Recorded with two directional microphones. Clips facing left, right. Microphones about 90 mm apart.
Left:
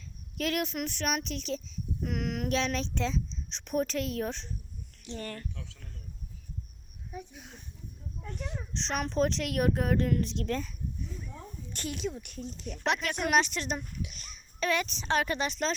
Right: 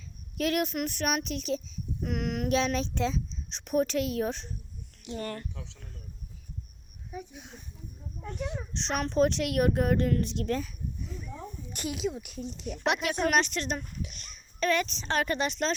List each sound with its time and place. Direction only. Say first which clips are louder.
0.3 s a child's voice: right 3 dB; 15° right (ahead or behind)
2.5 s a child's voice: right 4 dB; 15° right (ahead or behind)
5.2 s speech: right 4 dB; 25° right (ahead or behind)
7.1 s a child's voice: right 2 dB; 5° right (ahead or behind)
13.2 s a child's voice: even; 5° left (ahead or behind)